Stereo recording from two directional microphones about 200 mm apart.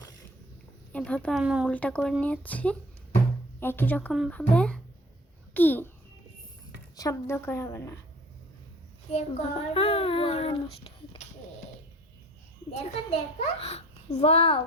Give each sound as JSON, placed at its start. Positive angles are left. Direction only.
{"t": 0.9, "sound": "speech", "side_deg": 5}
{"t": 1.7, "sound": "speech", "side_deg": 5}
{"t": 6.9, "sound": "speech", "side_deg": 15}
{"t": 9.1, "sound": "a child's voice", "side_deg": 30}
{"t": 12.7, "sound": "a child's voice", "side_deg": 30}